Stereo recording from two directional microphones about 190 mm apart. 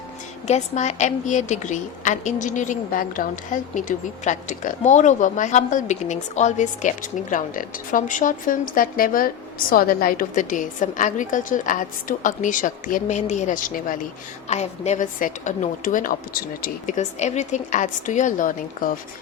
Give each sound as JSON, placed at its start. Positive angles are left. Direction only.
{"t": 0.4, "sound": "a woman's voice", "side_deg": 35}